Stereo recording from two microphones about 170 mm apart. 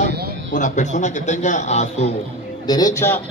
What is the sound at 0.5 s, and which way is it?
A man's voice, 45° left (ahead or behind).